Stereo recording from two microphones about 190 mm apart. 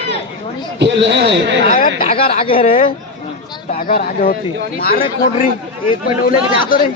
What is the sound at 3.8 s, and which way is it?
A man's voice, 50° left (ahead or behind).